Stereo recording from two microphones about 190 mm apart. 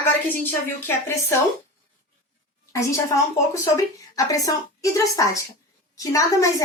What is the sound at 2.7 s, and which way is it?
A woman's voice, 15° left (ahead or behind).